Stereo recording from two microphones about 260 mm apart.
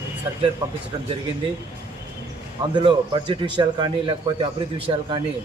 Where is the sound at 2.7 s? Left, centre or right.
Centre.